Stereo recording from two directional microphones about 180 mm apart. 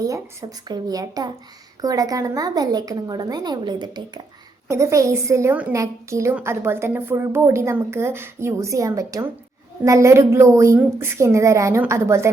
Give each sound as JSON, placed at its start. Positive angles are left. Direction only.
{"t": 0.7, "sound": "a woman's voice", "side_deg": -20}